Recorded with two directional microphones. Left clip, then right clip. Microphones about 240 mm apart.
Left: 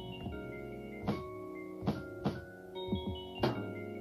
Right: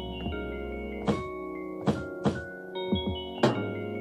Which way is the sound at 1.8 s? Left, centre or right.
Left.